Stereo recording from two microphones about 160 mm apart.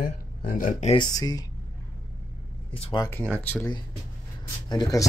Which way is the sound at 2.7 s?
35° left (ahead or behind).